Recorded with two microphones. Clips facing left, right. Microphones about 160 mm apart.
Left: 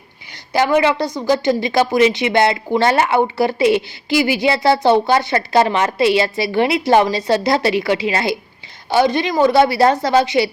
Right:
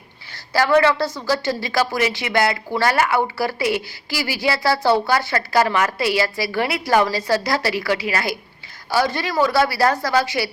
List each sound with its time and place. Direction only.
0.5 s a woman's voice: 20° left (ahead or behind)